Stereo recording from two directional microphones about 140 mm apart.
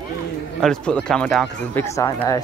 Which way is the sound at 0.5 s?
5° left (ahead or behind).